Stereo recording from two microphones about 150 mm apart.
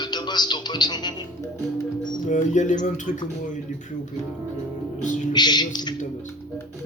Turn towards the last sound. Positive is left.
turn(degrees=30)  # may be behind; listen again after turning